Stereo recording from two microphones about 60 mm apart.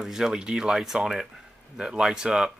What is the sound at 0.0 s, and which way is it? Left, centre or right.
Speech, centre.